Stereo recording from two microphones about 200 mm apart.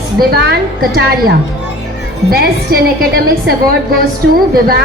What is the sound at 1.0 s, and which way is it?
Speech, 50° right (ahead or behind).